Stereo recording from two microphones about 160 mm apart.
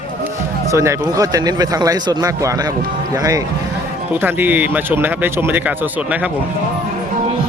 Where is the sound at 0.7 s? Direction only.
20° right (ahead or behind).